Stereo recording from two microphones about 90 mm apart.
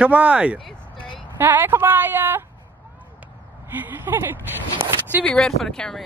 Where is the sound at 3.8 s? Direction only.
20° right (ahead or behind).